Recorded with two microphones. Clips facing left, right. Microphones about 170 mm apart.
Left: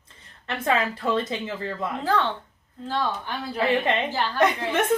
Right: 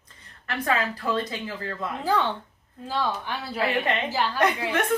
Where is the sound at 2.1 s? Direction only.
10° right (ahead or behind).